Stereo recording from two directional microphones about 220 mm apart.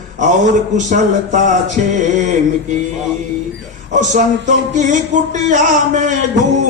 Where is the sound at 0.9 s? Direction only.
35° right (ahead or behind).